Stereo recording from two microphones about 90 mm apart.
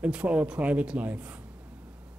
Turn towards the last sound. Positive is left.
turn(degrees=-15)  # may be behind; listen again after turning